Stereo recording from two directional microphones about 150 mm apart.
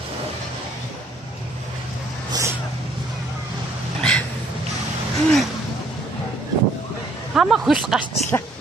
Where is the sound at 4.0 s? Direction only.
5° left (ahead or behind).